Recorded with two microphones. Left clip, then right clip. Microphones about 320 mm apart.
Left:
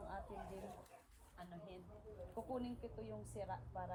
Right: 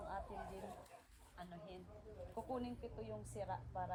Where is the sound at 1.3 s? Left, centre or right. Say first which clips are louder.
Right 1 dB; centre.